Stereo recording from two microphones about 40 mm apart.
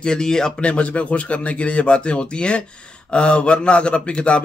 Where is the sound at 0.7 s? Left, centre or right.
Left.